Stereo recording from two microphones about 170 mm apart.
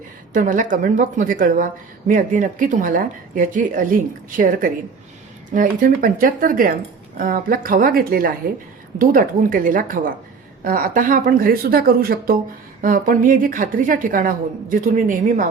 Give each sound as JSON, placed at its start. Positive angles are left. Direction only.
{"t": 0.3, "sound": "a woman's voice", "side_deg": -50}